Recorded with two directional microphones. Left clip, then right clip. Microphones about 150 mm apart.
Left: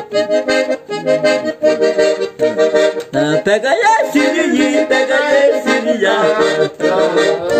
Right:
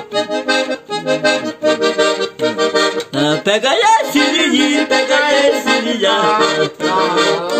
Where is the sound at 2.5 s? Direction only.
35° left (ahead or behind).